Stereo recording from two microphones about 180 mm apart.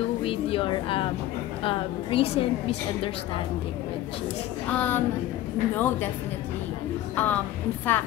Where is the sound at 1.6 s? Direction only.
30° left (ahead or behind).